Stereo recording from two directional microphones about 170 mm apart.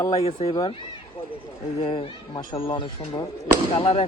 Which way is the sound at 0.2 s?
35° left (ahead or behind).